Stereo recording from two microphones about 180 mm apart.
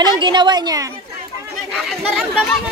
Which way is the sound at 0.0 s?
25° right (ahead or behind).